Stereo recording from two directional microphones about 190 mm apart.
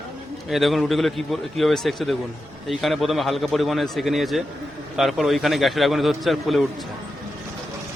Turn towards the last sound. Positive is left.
turn(degrees=0)  # may be behind; listen again after turning